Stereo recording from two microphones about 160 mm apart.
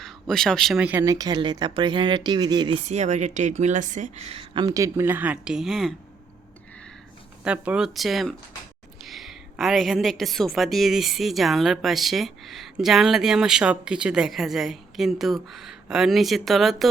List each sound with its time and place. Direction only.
0.0 s speech: centre (ahead or behind)
1.0 s speech: 20° right (ahead or behind)
2.8 s a woman's voice: 45° right (ahead or behind)
4.6 s speech: 20° right (ahead or behind); by 5.9 s centre (ahead or behind)
7.4 s a woman's voice: 10° right (ahead or behind)